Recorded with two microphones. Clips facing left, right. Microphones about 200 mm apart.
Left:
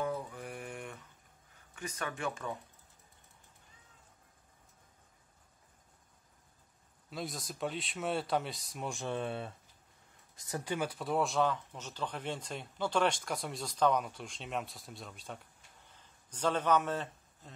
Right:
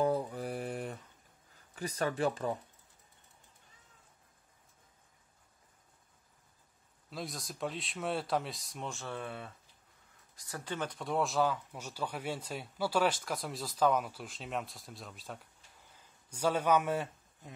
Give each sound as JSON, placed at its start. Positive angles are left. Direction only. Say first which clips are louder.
{"t": 0.0, "sound": "mantra", "louder": "right 6 dB", "side_deg": -35}
{"t": 1.8, "sound": "speech", "louder": "right 6 dB", "side_deg": -35}
{"t": 7.1, "sound": "speech", "louder": "left 1 dB", "side_deg": 0}
{"t": 8.8, "sound": "a man's voice", "louder": "left 4 dB", "side_deg": 15}